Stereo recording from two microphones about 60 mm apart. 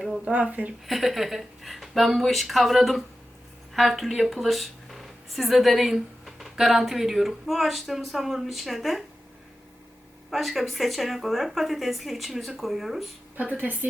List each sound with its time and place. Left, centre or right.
0.3 s speech: right
0.9 s speech: centre
10.2 s speech: centre
13.4 s speech: right